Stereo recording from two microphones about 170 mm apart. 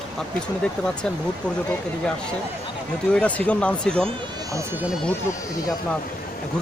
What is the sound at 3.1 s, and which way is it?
Speech, 5° left (ahead or behind).